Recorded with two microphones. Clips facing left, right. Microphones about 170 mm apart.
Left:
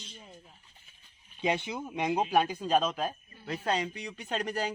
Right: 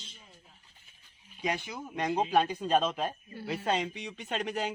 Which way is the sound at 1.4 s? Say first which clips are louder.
Left 3 dB; 25° left (ahead or behind).